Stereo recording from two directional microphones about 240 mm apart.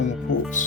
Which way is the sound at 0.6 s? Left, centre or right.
Left.